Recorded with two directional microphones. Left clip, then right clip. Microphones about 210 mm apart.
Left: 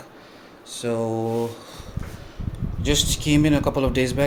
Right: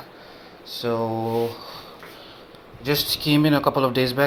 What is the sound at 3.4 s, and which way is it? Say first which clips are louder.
Speech: right 2 dB; 10° left (ahead or behind).